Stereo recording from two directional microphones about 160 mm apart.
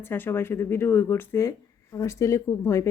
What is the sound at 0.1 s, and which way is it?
Speech, 15° left (ahead or behind).